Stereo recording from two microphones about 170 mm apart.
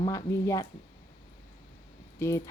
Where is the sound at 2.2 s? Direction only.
15° left (ahead or behind).